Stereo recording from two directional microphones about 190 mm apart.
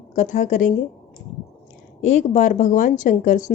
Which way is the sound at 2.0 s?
40° left (ahead or behind).